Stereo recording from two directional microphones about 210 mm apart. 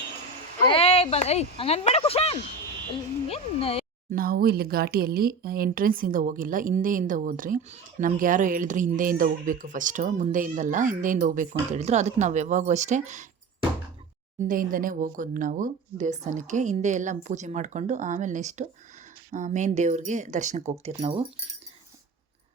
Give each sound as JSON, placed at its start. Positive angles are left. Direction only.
{"t": 0.6, "sound": "speech", "side_deg": 25}
{"t": 4.1, "sound": "speech", "side_deg": -45}